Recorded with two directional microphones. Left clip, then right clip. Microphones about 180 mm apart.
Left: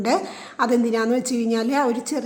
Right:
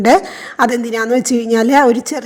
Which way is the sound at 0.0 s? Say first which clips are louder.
Right 11 dB; 35° right (ahead or behind).